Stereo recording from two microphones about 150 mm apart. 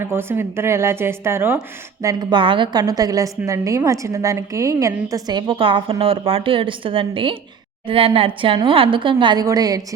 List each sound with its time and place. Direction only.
0.0 s a woman's voice: 15° right (ahead or behind)